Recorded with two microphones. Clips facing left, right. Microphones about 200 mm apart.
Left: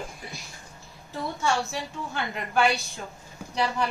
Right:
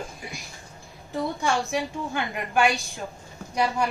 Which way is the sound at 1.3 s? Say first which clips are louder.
Even; 15° right (ahead or behind).